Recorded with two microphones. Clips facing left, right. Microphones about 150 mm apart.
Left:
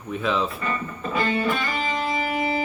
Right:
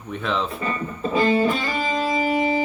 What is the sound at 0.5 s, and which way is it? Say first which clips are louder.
Music: right 2 dB; 25° right (ahead or behind).